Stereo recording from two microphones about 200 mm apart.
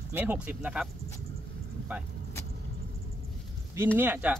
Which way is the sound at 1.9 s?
10° right (ahead or behind).